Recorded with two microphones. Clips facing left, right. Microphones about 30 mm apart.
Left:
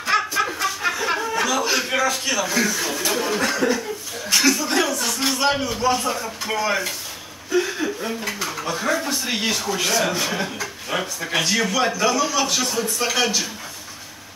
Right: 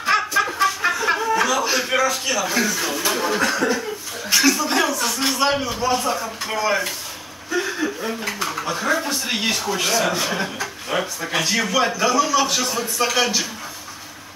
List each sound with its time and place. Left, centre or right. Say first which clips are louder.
0.1 s a sound: right 1 dB; centre
0.6 s chuckle: right 3 dB; centre
2.0 s a man's voice: right 1 dB; centre
4.5 s a sound: right 1 dB; centre
5.0 s a man's voice: right 1 dB; centre
9.8 s a man's voice: right 1 dB; centre
12.6 s speech: even; right
13.0 s speech: right 3 dB; centre